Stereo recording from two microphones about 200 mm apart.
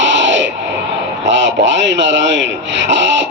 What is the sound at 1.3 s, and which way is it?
Speech, 65° right (ahead or behind).